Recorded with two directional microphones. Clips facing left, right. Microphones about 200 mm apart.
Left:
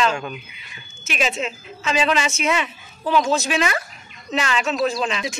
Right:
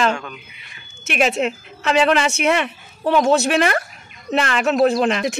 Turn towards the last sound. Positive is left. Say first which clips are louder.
# right 6 dB
turn(degrees=-60)  # may be behind; listen again after turning